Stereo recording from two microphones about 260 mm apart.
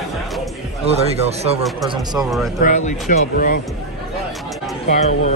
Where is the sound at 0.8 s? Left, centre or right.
Right.